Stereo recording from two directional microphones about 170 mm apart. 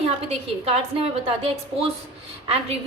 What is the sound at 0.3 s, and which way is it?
A woman's voice, 35° right (ahead or behind).